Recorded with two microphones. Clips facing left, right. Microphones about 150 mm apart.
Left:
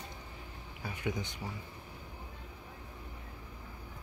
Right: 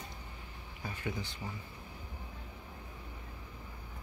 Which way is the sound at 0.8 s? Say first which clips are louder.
Left 2 dB; 15° left (ahead or behind).